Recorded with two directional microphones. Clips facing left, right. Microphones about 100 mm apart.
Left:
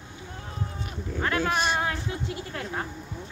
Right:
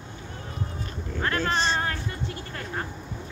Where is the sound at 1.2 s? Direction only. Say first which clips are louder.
Even; 10° left (ahead or behind).